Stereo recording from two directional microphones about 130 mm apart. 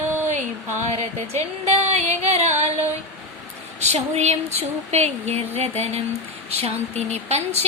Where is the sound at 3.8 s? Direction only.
60° right (ahead or behind).